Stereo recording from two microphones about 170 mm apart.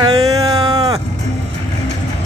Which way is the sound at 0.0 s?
20° right (ahead or behind).